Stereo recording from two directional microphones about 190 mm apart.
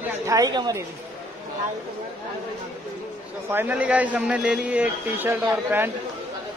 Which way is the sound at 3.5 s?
10° right (ahead or behind).